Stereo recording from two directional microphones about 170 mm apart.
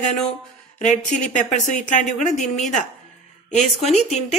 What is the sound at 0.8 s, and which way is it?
A woman's voice, 45° left (ahead or behind).